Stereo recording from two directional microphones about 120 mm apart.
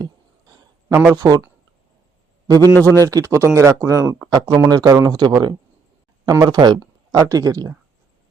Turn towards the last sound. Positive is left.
turn(degrees=-30)  # may be behind; listen again after turning